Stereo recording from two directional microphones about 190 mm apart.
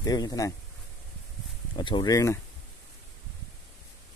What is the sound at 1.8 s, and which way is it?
Speech, 25° left (ahead or behind).